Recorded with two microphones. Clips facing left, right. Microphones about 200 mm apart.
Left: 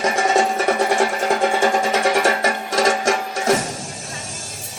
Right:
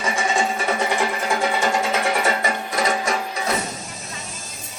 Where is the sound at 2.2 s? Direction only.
90° left.